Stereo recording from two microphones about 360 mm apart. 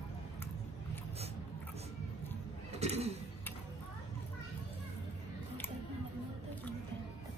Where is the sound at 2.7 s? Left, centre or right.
Centre.